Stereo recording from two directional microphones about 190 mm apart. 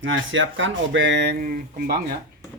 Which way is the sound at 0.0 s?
90° right.